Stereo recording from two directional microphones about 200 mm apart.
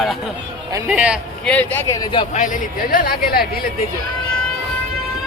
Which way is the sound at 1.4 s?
10° left (ahead or behind).